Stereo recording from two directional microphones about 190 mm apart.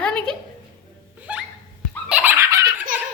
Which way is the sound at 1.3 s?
5° right (ahead or behind).